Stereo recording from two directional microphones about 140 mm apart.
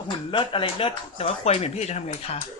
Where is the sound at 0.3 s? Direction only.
40° left (ahead or behind); by 2.4 s 55° left (ahead or behind).